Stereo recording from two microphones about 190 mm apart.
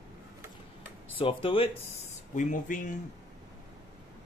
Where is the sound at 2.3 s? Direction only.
40° left (ahead or behind).